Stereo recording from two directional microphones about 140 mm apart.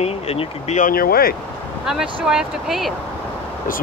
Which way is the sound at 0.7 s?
80° left.